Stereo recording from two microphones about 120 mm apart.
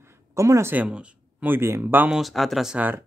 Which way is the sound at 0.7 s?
10° right (ahead or behind).